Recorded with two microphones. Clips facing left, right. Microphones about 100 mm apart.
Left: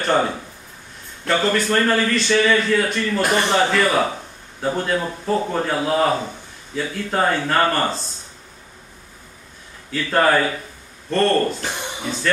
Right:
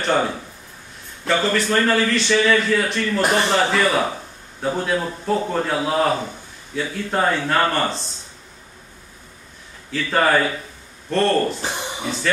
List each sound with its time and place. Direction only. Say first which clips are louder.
0.0 s a man's voice: left 1 dB; centre (ahead or behind)
9.9 s a man's voice: left 1 dB; centre (ahead or behind)
11.6 s a sound: right 1 dB; 15° right (ahead or behind)